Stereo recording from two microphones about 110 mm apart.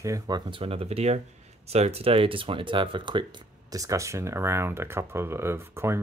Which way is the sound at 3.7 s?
30° right (ahead or behind).